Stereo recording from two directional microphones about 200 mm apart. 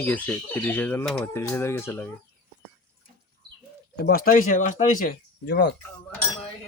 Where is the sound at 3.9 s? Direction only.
50° left (ahead or behind).